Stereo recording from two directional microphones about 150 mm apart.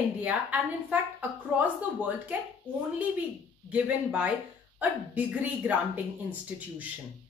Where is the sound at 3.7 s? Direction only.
10° right (ahead or behind).